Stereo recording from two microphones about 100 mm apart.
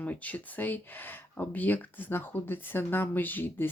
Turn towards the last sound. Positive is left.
turn(degrees=20)  # may be behind; listen again after turning